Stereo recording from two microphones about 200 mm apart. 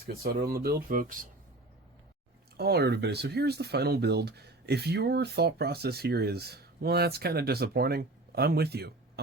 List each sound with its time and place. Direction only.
0.0 s speech: 50° right (ahead or behind)
2.6 s speech: 55° right (ahead or behind)